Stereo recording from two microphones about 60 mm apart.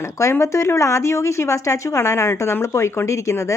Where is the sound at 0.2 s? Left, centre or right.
Left.